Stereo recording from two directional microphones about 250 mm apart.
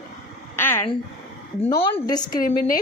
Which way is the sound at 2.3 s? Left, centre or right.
Left.